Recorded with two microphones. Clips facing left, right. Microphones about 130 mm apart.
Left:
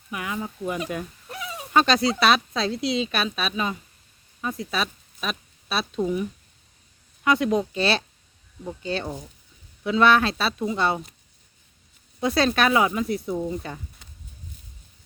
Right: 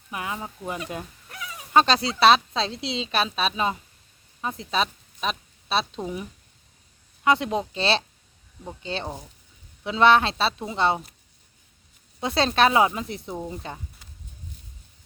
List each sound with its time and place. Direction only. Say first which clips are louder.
0.1 s a woman's voice: left 1 dB; 30° right (ahead or behind)
1.3 s sheep: left 5 dB; 25° left (ahead or behind)
1.7 s a woman's voice: even; 30° right (ahead or behind)
7.3 s a woman's voice: left 1 dB; 25° right (ahead or behind)
12.2 s a woman's voice: even; 25° right (ahead or behind)